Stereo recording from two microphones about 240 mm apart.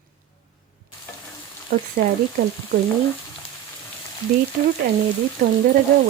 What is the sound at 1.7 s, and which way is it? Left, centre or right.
Speech, right.